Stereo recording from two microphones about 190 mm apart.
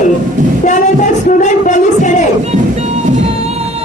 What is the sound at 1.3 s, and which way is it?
Music, 40° left (ahead or behind).